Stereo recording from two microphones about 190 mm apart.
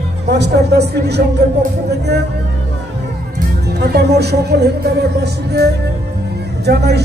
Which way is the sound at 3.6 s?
60° right (ahead or behind).